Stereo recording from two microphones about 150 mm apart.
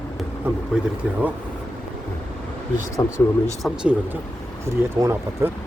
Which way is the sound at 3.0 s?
25° left (ahead or behind).